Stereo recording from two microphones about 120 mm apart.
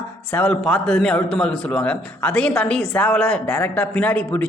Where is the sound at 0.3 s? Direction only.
15° left (ahead or behind).